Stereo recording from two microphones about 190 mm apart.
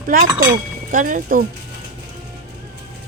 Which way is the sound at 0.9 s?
45° right (ahead or behind).